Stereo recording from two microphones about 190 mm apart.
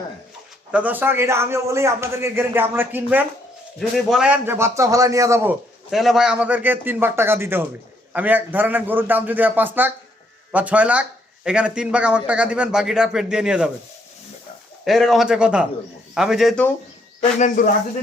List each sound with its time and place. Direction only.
0.7 s a man's voice: 10° right (ahead or behind)
5.9 s a man's voice: centre (ahead or behind)
14.8 s a man's voice: centre (ahead or behind)
17.2 s speech: 45° left (ahead or behind)